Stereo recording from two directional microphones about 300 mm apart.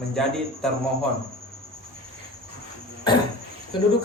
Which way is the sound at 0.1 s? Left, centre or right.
Centre.